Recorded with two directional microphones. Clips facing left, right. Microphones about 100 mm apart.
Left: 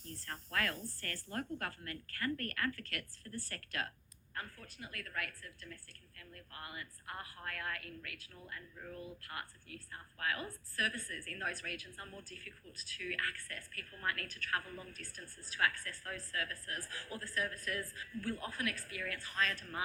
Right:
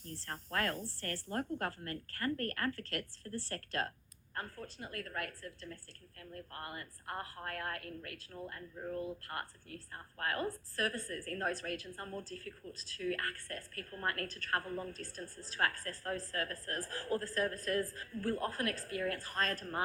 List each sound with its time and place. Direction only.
0.0 s a woman's voice: 35° right (ahead or behind)